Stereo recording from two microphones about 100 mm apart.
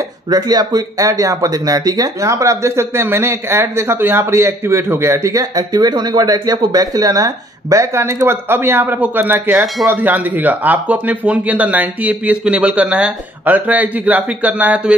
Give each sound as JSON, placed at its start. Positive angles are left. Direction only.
{"t": 0.3, "sound": "speech", "side_deg": -45}